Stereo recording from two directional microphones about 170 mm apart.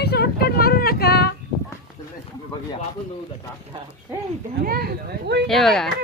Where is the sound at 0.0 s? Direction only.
70° left (ahead or behind).